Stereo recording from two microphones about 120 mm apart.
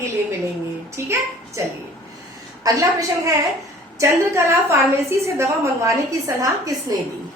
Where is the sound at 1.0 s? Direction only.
20° right (ahead or behind).